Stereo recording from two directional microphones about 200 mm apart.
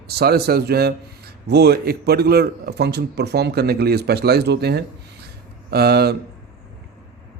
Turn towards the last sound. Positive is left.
turn(degrees=-50)  # may be behind; listen again after turning